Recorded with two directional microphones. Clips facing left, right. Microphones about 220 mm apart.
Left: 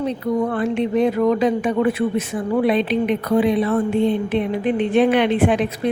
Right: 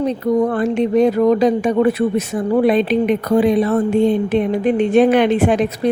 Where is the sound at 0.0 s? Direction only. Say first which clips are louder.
Right 4 dB; 40° right (ahead or behind).